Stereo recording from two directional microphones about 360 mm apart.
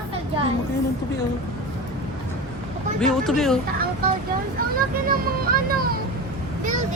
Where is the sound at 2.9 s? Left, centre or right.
Centre.